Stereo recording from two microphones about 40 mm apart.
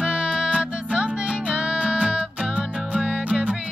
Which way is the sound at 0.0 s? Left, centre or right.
Right.